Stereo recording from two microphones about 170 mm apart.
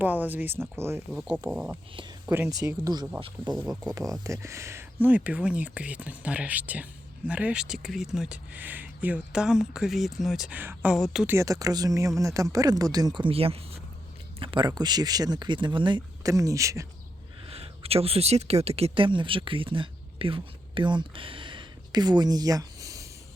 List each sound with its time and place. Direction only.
0.0 s speech: 10° right (ahead or behind)
2.5 s speech: 20° right (ahead or behind); by 11.3 s 5° right (ahead or behind)
11.3 s speech: 20° right (ahead or behind)
17.4 s speech: 35° right (ahead or behind); by 23.0 s 20° right (ahead or behind)